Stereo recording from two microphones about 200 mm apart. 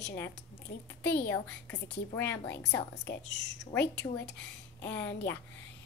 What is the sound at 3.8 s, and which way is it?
A woman's voice, 60° left (ahead or behind).